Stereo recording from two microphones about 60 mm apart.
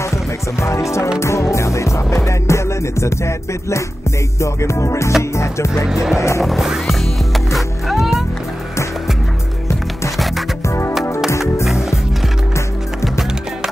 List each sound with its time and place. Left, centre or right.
0.6 s speech: left
1.2 s music: left
5.9 s music: centre
10.7 s music: left